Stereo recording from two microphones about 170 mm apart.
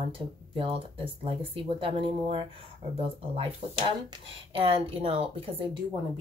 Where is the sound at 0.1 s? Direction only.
30° right (ahead or behind).